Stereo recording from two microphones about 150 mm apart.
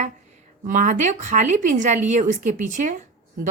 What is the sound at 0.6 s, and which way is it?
Speech, 60° right (ahead or behind).